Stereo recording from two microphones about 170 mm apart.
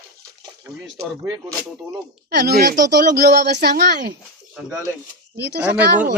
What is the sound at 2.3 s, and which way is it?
Speech, 70° right (ahead or behind).